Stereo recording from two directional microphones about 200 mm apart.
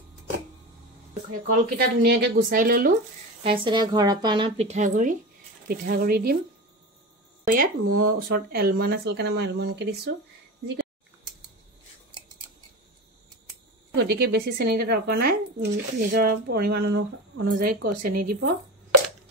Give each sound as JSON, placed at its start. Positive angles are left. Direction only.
{"t": 1.6, "sound": "speech", "side_deg": -55}
{"t": 3.4, "sound": "a woman's voice", "side_deg": -25}
{"t": 7.4, "sound": "speech", "side_deg": -45}
{"t": 13.9, "sound": "speech", "side_deg": -55}